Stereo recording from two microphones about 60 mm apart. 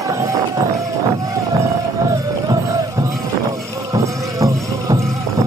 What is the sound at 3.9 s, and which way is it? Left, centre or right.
Music, right.